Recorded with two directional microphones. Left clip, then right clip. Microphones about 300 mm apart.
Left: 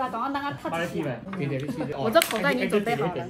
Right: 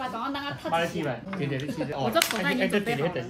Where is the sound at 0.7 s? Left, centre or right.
Centre.